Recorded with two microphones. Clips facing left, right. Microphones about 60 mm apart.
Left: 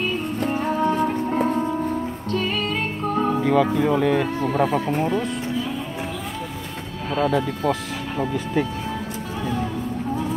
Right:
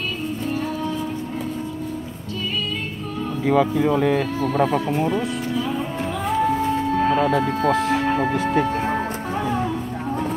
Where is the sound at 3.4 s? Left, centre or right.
Centre.